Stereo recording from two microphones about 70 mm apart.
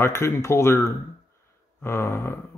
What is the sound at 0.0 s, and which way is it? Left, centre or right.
Speech, left.